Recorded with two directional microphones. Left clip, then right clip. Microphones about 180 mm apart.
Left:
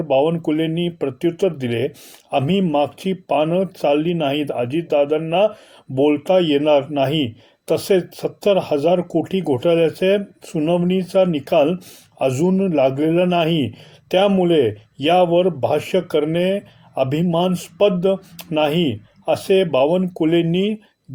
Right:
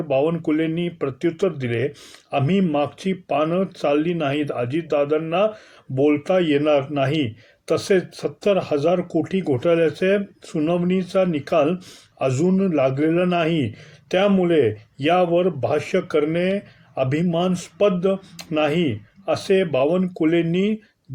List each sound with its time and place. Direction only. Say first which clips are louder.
0.1 s speech: left 3 dB; 30° left (ahead or behind)